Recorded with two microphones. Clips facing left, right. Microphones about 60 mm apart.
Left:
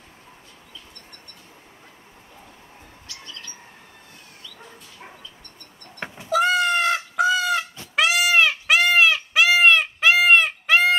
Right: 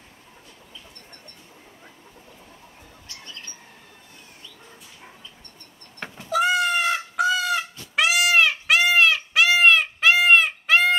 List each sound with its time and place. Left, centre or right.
3.1 s bird: right
6.0 s cat: centre
6.3 s goat: centre
7.2 s goose: centre
7.9 s goat: centre